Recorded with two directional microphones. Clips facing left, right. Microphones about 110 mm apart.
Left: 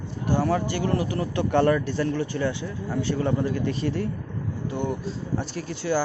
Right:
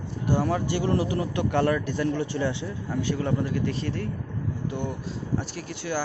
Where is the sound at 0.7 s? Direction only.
25° right (ahead or behind).